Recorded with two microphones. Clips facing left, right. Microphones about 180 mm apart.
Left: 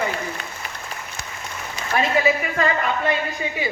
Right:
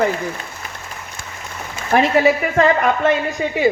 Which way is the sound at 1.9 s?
65° right (ahead or behind).